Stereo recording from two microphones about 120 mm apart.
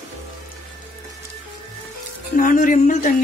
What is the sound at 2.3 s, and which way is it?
Music, 90° left.